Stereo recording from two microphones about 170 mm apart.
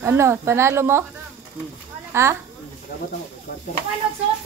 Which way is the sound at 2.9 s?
55° left (ahead or behind).